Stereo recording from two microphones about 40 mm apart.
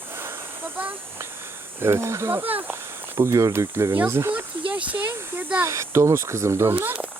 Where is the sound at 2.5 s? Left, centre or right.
Right.